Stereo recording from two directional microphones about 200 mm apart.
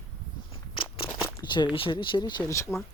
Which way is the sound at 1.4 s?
20° left (ahead or behind).